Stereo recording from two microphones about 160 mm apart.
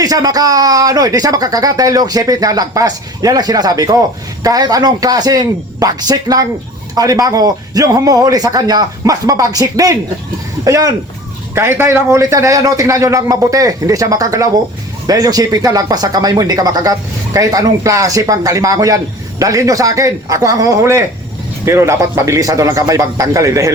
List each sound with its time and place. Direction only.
0.0 s speech: 25° right (ahead or behind)